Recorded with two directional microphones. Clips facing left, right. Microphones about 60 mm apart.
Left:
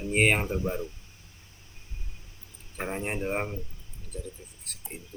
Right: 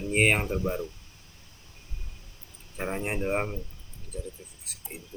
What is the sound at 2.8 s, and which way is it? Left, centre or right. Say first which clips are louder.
Speech: right 2 dB; centre.